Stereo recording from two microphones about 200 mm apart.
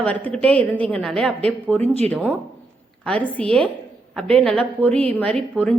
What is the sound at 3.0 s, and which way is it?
A woman's voice, 5° left (ahead or behind).